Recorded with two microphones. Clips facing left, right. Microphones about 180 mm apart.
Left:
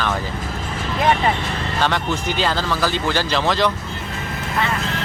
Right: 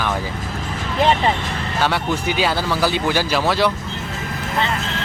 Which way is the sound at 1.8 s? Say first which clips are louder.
Right 1 dB; 10° right (ahead or behind).